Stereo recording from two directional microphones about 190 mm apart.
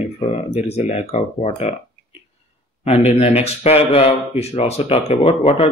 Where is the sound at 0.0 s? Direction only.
35° left (ahead or behind).